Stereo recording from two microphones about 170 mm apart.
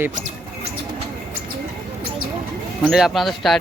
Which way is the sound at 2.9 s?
Centre (ahead or behind).